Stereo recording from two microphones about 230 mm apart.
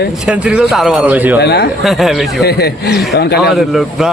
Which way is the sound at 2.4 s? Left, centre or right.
Left.